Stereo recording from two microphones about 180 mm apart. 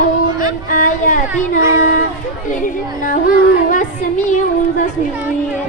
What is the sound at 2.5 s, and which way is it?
Speech, 45° left (ahead or behind).